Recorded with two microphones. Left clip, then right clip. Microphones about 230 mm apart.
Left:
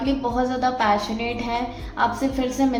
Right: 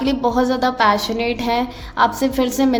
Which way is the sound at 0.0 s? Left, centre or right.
Right.